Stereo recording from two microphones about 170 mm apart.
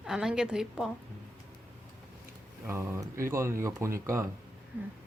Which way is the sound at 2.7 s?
15° right (ahead or behind).